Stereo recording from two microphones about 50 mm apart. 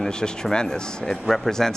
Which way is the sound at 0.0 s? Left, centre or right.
Centre.